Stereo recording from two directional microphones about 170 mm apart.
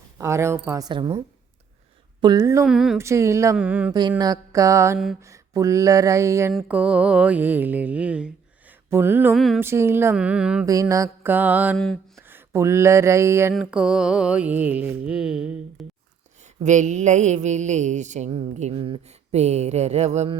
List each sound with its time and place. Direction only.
0.2 s speech: 15° right (ahead or behind)
2.2 s a sound: 20° right (ahead or behind)
2.6 s mantra: 5° right (ahead or behind)
3.0 s speech: 15° right (ahead or behind)
4.2 s a sound: 20° right (ahead or behind)
6.5 s speech: 5° right (ahead or behind)
9.3 s mantra: centre (ahead or behind)
9.6 s speech: 15° right (ahead or behind)
10.7 s speech: 20° right (ahead or behind)
12.1 s a sound: 15° right (ahead or behind)
13.5 s mantra: 5° right (ahead or behind)
16.6 s mantra: 45° right (ahead or behind)